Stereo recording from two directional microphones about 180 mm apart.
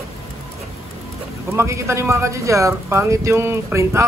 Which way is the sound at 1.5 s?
15° right (ahead or behind).